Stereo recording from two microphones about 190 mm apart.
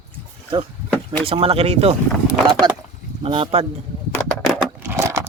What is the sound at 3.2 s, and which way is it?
Speech, 30° right (ahead or behind).